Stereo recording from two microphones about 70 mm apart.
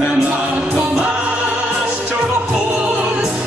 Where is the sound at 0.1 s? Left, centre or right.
Centre.